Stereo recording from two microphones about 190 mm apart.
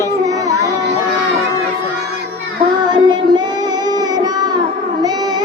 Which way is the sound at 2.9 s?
25° right (ahead or behind).